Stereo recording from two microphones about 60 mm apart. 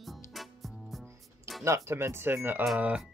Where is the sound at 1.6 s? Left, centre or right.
Right.